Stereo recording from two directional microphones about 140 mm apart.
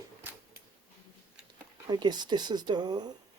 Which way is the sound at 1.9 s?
30° right (ahead or behind).